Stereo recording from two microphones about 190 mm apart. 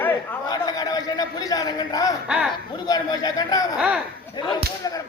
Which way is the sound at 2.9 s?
20° left (ahead or behind).